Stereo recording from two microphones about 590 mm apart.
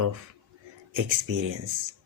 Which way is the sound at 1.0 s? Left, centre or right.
Right.